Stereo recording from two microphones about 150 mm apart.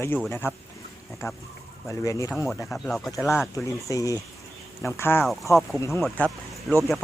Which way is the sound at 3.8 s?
20° left (ahead or behind).